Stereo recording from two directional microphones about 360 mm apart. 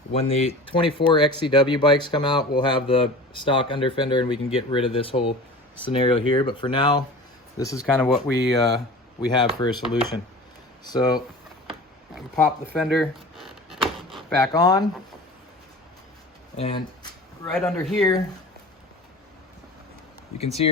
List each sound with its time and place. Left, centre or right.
0.1 s speech: centre
10.8 s speech: centre
16.6 s a sound: centre
17.5 s speech: centre
20.4 s speech: centre